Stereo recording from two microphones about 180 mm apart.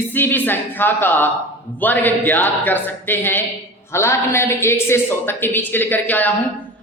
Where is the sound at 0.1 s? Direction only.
10° left (ahead or behind).